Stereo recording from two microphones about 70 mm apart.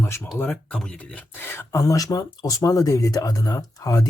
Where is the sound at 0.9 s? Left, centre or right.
Centre.